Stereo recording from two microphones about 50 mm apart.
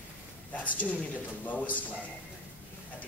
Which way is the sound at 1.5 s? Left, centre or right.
Left.